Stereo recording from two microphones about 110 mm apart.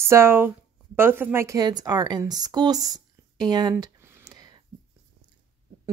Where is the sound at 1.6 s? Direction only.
35° right (ahead or behind).